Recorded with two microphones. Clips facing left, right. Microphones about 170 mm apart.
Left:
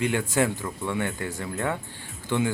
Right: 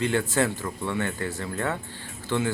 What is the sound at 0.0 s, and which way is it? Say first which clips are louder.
Speech: even; 15° left (ahead or behind).